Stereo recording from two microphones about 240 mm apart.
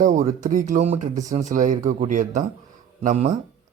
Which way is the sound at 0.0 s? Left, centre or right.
Right.